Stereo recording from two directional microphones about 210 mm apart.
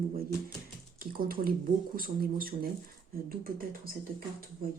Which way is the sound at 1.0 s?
45° right (ahead or behind).